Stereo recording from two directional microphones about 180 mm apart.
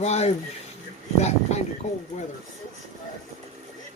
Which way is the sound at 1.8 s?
40° left (ahead or behind).